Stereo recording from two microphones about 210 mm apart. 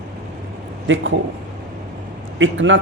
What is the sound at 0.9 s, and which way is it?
Speech, 65° right (ahead or behind).